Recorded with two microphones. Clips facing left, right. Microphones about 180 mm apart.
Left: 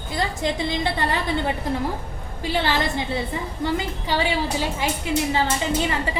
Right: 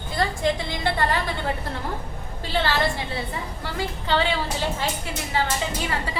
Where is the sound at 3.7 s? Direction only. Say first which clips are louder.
Even; 10° left (ahead or behind).